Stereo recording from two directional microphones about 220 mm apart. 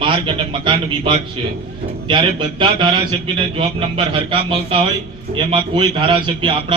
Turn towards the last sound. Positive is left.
turn(degrees=-20)  # may be behind; listen again after turning